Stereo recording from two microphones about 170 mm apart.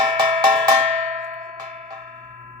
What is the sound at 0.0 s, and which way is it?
Cowbell, 25° right (ahead or behind).